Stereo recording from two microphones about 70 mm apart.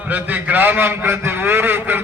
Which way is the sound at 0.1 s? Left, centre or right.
Right.